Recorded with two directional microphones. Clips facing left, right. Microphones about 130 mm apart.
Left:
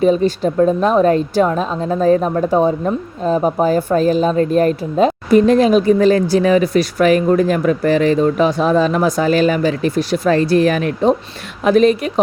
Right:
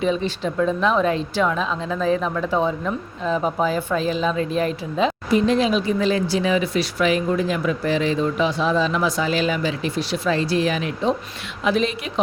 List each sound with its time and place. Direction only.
0.0 s speech: 45° left (ahead or behind)